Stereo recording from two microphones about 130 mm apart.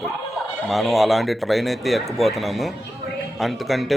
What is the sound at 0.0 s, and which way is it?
A man's voice, centre (ahead or behind).